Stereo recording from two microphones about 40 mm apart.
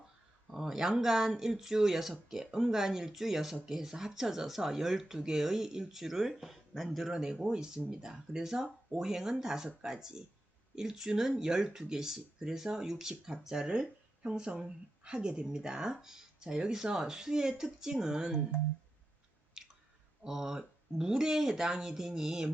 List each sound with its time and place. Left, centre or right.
0.5 s speech: centre
7.1 s speech: centre
19.6 s chewing: centre
20.2 s speech: centre